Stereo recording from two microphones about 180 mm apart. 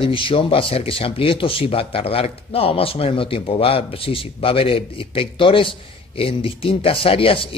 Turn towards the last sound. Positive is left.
turn(degrees=30)  # may be behind; listen again after turning